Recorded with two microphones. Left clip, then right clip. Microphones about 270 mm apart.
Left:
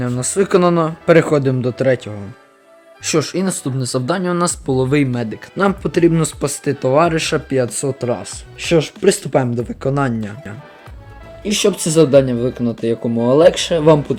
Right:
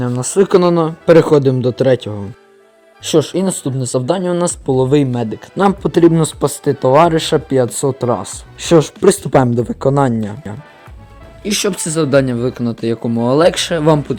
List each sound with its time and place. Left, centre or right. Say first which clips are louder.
0.0 s speech: right 4 dB; centre
10.2 s speech: right 4 dB; centre
11.4 s speech: left 1 dB; right